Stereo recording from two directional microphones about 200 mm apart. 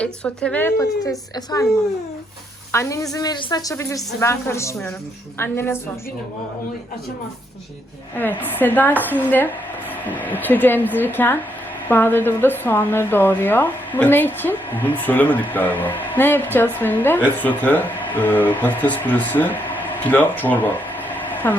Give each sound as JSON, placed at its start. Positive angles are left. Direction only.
{"t": 0.0, "sound": "a woman's voice", "side_deg": 5}
{"t": 2.7, "sound": "a woman's voice", "side_deg": 15}
{"t": 8.1, "sound": "a woman's voice", "side_deg": 10}